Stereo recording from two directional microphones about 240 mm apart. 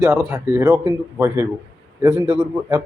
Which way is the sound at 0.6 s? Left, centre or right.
Centre.